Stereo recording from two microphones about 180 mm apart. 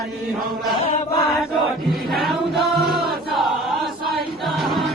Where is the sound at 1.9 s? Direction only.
Centre (ahead or behind).